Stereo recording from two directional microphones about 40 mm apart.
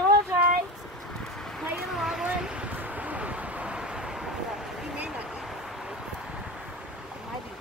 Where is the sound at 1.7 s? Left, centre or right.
Centre.